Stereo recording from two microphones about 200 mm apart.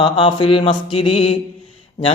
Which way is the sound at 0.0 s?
25° left (ahead or behind).